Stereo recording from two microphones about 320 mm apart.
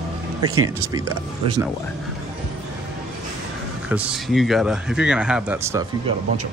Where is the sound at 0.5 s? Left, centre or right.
Right.